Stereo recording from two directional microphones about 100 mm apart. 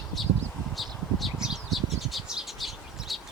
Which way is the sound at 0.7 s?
Centre (ahead or behind).